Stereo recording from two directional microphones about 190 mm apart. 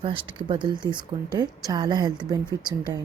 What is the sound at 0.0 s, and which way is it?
Speech, 30° right (ahead or behind).